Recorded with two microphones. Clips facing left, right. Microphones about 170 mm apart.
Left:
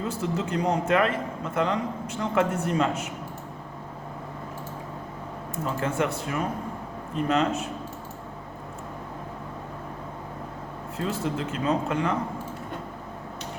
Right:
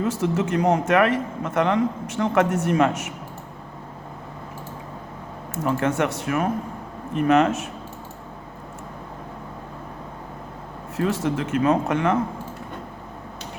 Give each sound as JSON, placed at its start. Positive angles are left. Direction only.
{"t": 0.2, "sound": "a man's voice", "side_deg": -80}
{"t": 5.6, "sound": "speech", "side_deg": -70}
{"t": 10.9, "sound": "speech", "side_deg": -80}